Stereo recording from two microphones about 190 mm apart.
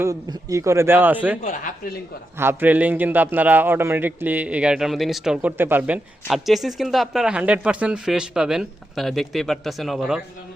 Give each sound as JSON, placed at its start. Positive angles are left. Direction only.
{"t": 0.0, "sound": "a man's voice", "side_deg": -15}
{"t": 1.5, "sound": "speech", "side_deg": 45}
{"t": 2.4, "sound": "a man's voice", "side_deg": -10}